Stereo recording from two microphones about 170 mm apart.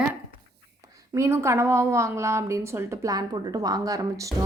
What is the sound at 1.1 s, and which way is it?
A woman's voice, 15° right (ahead or behind).